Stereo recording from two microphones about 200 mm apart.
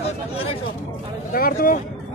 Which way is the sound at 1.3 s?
45° left (ahead or behind).